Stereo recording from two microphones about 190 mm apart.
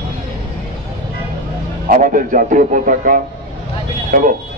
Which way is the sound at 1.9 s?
45° right (ahead or behind).